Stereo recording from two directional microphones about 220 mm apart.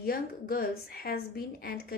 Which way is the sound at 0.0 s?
40° left (ahead or behind).